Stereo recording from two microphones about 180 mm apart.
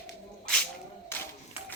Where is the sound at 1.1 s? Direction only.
15° left (ahead or behind).